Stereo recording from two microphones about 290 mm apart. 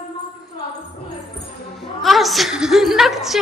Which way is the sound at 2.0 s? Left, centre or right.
Centre.